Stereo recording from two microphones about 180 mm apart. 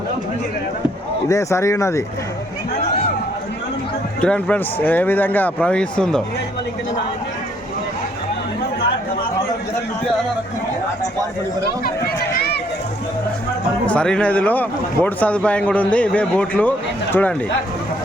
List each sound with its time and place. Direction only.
1.3 s speech: 15° left (ahead or behind)
4.2 s speech: 5° left (ahead or behind)
12.3 s a sound: 60° left (ahead or behind)
13.8 s speech: 5° left (ahead or behind)